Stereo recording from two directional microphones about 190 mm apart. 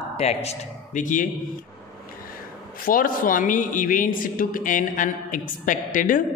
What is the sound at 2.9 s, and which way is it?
Speech, 45° left (ahead or behind).